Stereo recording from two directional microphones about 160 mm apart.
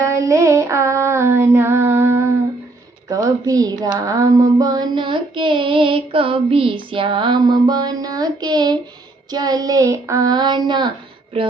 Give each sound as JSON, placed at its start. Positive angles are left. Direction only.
{"t": 0.0, "sound": "female singing", "side_deg": -20}
{"t": 3.2, "sound": "a woman's voice", "side_deg": -20}
{"t": 3.9, "sound": "female singing", "side_deg": -20}